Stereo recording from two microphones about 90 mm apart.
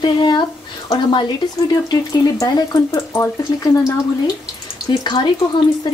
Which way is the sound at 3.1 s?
30° left (ahead or behind).